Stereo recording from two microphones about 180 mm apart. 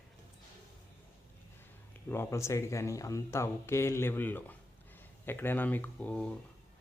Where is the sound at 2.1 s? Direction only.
15° left (ahead or behind).